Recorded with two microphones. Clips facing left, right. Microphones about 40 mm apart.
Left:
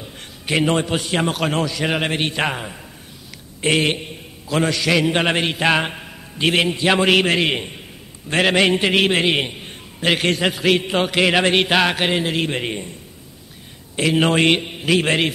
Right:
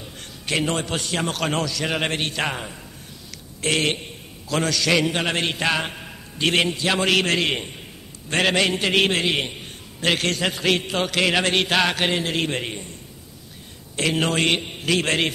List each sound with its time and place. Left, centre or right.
0.0 s a sound: centre
0.9 s a man's voice: centre
5.1 s a man's voice: left
6.7 s a man's voice: left
9.7 s a sound: centre
10.5 s a man's voice: centre
10.9 s a man's voice: centre
13.9 s a man's voice: centre